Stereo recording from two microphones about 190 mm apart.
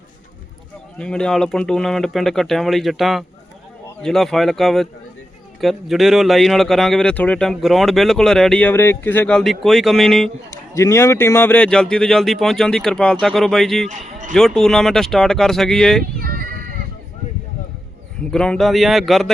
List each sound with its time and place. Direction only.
0.9 s speech: 5° left (ahead or behind)
10.5 s speech: 15° left (ahead or behind)
13.8 s speech: 40° right (ahead or behind)
14.3 s speech: 5° left (ahead or behind)
16.2 s bleat: 50° right (ahead or behind)
18.3 s speech: 5° left (ahead or behind)